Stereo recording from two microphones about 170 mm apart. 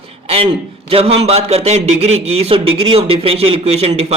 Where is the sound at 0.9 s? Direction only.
35° right (ahead or behind).